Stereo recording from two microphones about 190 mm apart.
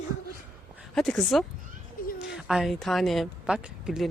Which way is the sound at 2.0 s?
50° left (ahead or behind).